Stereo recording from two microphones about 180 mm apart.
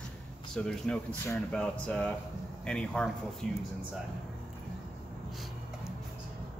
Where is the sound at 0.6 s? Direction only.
5° left (ahead or behind).